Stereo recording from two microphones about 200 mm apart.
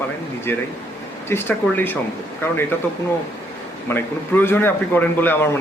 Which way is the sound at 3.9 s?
10° left (ahead or behind).